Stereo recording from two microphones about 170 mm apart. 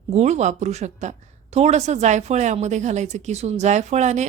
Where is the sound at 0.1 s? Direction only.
40° right (ahead or behind).